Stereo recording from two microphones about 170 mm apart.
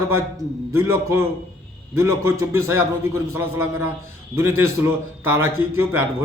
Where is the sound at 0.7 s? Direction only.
15° right (ahead or behind).